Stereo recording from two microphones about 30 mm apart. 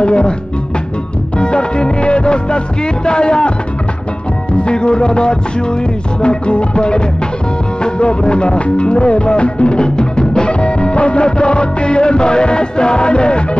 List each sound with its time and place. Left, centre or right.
0.0 s music: left
1.4 s music: left
4.6 s music: left